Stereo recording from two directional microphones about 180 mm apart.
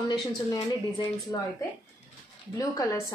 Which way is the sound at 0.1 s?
25° left (ahead or behind).